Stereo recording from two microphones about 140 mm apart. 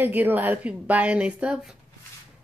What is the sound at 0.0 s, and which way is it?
Speech, 10° right (ahead or behind).